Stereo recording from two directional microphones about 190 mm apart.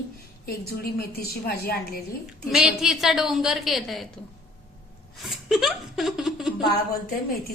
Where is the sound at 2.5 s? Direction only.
5° right (ahead or behind).